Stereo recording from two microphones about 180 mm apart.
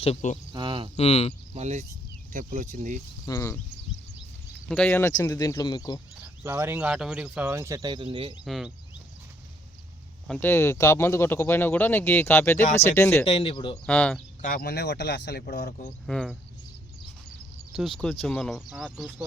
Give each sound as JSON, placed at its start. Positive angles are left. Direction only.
{"t": 0.0, "sound": "speech", "side_deg": 40}
{"t": 0.5, "sound": "speech", "side_deg": -25}
{"t": 0.9, "sound": "speech", "side_deg": 35}
{"t": 1.5, "sound": "speech", "side_deg": -40}
{"t": 3.2, "sound": "speech", "side_deg": 15}
{"t": 4.7, "sound": "speech", "side_deg": 10}
{"t": 6.4, "sound": "speech", "side_deg": -15}
{"t": 8.4, "sound": "speech", "side_deg": 0}
{"t": 10.2, "sound": "speech", "side_deg": 10}
{"t": 13.2, "sound": "speech", "side_deg": 30}
{"t": 13.8, "sound": "speech", "side_deg": 5}
{"t": 14.4, "sound": "speech", "side_deg": 55}
{"t": 16.0, "sound": "speech", "side_deg": 0}
{"t": 17.7, "sound": "speech", "side_deg": 0}